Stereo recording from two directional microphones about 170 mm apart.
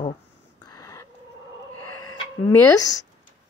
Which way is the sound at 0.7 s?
20° left (ahead or behind).